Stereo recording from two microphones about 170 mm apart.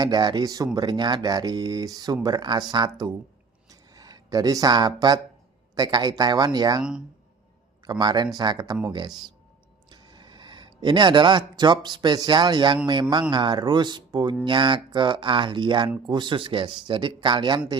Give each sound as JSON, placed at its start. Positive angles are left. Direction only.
{"t": 0.0, "sound": "speech", "side_deg": -25}
{"t": 3.7, "sound": "a sound", "side_deg": -20}
{"t": 5.7, "sound": "speech", "side_deg": -25}
{"t": 7.9, "sound": "speech", "side_deg": -25}